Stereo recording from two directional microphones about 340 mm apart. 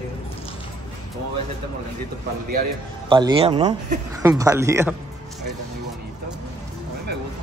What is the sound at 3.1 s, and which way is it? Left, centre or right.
Speech, centre.